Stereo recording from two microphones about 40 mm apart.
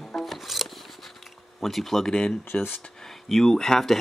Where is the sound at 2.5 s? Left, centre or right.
Left.